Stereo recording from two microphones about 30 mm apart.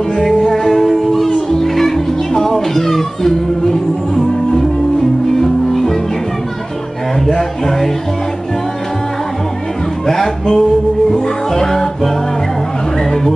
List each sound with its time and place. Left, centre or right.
0.1 s music: centre
7.2 s music: centre
10.0 s music: centre